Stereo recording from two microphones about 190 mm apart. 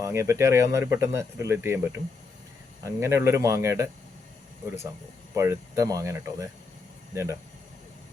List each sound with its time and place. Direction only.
0.0 s speech: 15° right (ahead or behind)
5.3 s speech: 15° right (ahead or behind)